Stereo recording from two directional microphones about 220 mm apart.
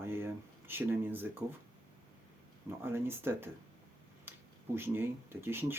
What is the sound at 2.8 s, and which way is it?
Speech, 10° right (ahead or behind).